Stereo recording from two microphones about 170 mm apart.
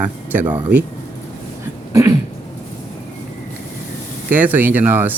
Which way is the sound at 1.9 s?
20° right (ahead or behind).